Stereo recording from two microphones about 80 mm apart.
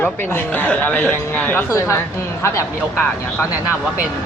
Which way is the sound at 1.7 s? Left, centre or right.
Left.